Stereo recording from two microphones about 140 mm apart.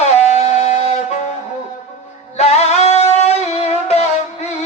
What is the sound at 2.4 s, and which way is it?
Music, 50° left (ahead or behind).